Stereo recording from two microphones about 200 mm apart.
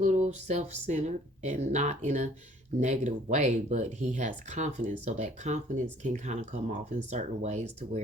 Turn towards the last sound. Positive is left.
turn(degrees=-35)  # may be behind; listen again after turning